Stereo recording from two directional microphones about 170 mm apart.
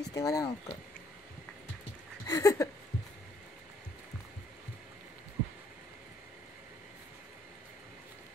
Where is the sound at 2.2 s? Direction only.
20° left (ahead or behind).